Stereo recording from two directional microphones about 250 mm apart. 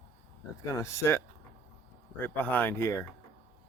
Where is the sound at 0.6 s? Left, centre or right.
Centre.